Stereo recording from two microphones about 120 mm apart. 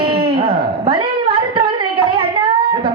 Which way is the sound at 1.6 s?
45° right (ahead or behind).